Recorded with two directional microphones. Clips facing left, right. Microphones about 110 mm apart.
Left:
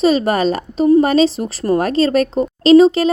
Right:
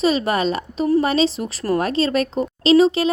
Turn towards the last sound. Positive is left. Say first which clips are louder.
# left 5 dB
turn(degrees=40)  # may be behind; listen again after turning